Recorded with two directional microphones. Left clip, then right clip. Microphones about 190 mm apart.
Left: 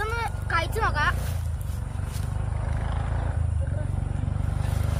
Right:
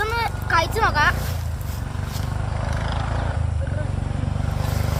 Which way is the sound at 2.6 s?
50° right (ahead or behind).